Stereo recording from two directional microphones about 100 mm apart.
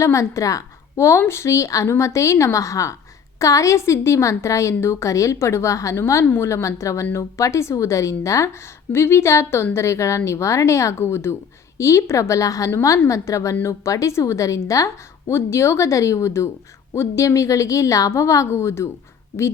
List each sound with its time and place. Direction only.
0.0 s a woman's voice: 30° left (ahead or behind)